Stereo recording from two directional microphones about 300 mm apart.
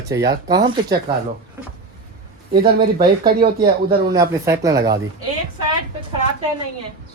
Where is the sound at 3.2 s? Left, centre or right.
Right.